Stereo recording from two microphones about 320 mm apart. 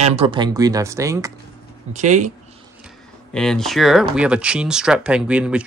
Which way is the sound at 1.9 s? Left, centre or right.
Right.